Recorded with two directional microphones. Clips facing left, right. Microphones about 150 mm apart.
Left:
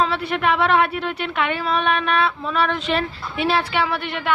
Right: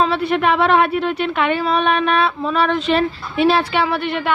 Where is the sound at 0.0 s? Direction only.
25° right (ahead or behind).